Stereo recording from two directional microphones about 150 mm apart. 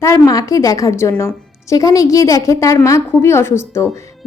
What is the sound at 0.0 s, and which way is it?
A woman's voice, 20° left (ahead or behind).